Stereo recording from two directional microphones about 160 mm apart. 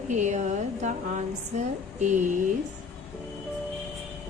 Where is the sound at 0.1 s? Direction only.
50° right (ahead or behind).